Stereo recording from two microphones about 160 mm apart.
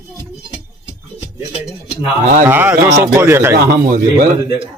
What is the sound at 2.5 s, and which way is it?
Speech, 10° right (ahead or behind).